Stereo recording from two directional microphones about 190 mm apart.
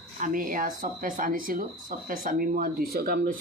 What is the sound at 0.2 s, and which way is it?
Speech, 45° right (ahead or behind).